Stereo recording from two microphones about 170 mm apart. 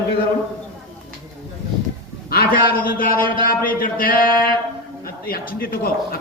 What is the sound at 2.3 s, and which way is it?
A man's voice, 60° left (ahead or behind).